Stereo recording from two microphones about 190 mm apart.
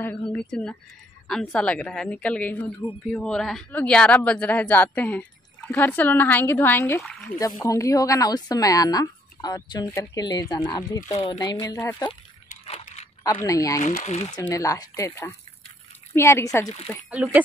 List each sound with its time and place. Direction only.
0.0 s speech: 5° left (ahead or behind)
7.0 s speech: centre (ahead or behind)
7.3 s speech: 20° left (ahead or behind)
13.2 s speech: 15° left (ahead or behind)
14.0 s speech: 35° left (ahead or behind)
14.5 s speech: 20° left (ahead or behind)
17.1 s speech: 5° right (ahead or behind)